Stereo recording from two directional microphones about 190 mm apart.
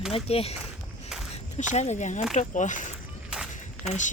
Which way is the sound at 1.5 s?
35° left (ahead or behind).